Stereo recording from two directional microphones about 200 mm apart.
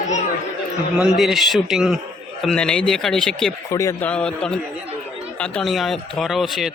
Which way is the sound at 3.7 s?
15° left (ahead or behind).